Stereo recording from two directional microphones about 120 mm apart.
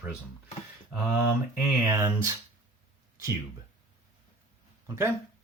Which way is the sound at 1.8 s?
20° right (ahead or behind).